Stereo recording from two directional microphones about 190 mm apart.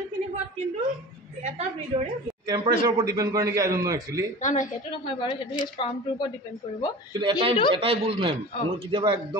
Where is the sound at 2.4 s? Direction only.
20° right (ahead or behind).